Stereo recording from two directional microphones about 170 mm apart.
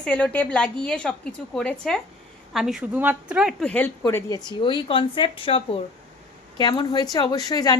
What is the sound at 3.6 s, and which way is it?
A woman's voice, 10° left (ahead or behind).